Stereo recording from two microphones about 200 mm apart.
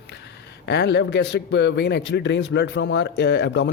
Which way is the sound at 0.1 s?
60° left (ahead or behind).